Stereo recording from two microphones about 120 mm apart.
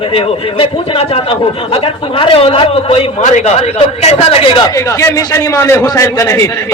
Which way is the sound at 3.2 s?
70° left (ahead or behind).